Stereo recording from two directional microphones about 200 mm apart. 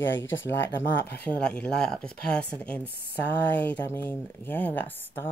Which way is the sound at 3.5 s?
10° left (ahead or behind).